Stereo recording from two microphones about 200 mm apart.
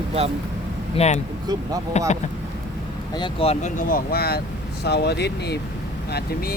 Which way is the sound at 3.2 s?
30° left (ahead or behind).